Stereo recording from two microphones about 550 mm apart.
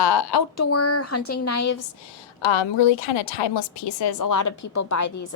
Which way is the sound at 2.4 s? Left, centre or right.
Left.